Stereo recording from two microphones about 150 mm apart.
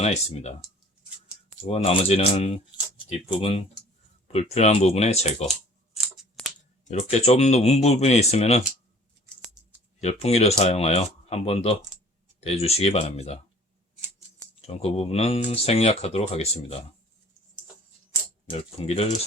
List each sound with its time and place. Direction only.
0.0 s speech: 45° left (ahead or behind)
1.6 s speech: 40° left (ahead or behind)
5.9 s scissors: centre (ahead or behind)
6.9 s speech: 45° left (ahead or behind)
10.0 s speech: 45° left (ahead or behind)
14.7 s speech: 40° left (ahead or behind)
18.8 s speech: 45° left (ahead or behind)